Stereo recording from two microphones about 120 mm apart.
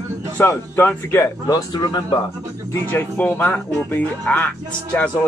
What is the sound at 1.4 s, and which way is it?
Speech, 35° left (ahead or behind).